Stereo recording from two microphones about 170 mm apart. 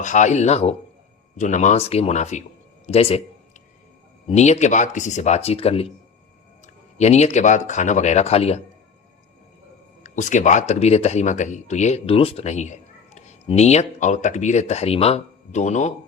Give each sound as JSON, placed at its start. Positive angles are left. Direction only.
{"t": 0.0, "sound": "speech", "side_deg": 45}
{"t": 2.8, "sound": "a sound", "side_deg": 35}
{"t": 4.3, "sound": "speech", "side_deg": 40}
{"t": 7.0, "sound": "speech", "side_deg": 40}
{"t": 10.0, "sound": "speech", "side_deg": 45}